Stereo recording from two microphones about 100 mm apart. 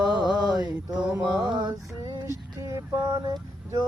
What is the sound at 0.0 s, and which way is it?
Mantra, 50° right (ahead or behind).